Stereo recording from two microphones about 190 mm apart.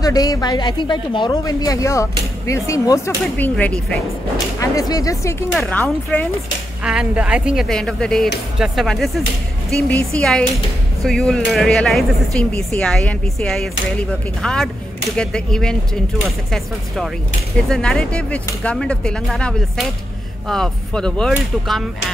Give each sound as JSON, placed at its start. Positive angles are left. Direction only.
{"t": 0.0, "sound": "speech", "side_deg": 20}
{"t": 4.6, "sound": "speech", "side_deg": 20}
{"t": 5.5, "sound": "speech", "side_deg": 5}
{"t": 6.8, "sound": "a woman's voice", "side_deg": -5}